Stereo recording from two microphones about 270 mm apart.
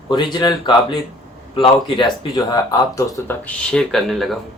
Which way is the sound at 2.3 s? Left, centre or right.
Centre.